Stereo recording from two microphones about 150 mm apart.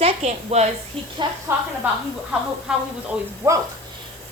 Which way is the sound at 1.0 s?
35° right (ahead or behind).